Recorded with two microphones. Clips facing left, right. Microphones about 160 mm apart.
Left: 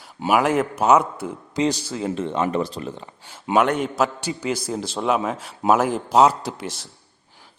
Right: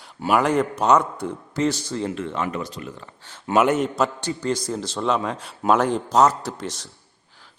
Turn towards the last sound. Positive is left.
turn(degrees=10)  # may be behind; listen again after turning